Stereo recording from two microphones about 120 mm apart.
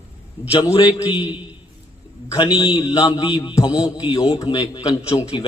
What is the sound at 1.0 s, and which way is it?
Speech, 15° right (ahead or behind).